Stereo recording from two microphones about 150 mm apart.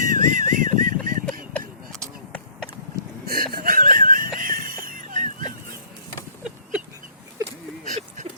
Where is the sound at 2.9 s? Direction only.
80° right; by 5.3 s 60° right (ahead or behind).